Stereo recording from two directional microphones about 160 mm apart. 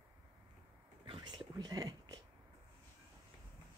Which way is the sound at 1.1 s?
30° right (ahead or behind).